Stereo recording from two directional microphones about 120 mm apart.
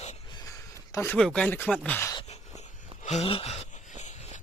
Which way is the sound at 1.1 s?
5° left (ahead or behind).